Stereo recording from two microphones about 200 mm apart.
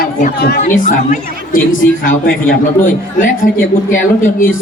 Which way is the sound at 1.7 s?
75° left (ahead or behind).